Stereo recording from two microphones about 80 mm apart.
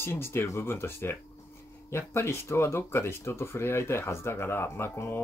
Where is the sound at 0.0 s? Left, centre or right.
Left.